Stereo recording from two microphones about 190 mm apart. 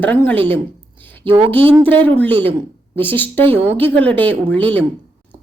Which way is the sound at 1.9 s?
10° left (ahead or behind).